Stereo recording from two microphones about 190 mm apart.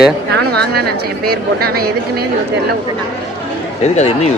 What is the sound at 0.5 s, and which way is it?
A woman's voice, 55° right (ahead or behind).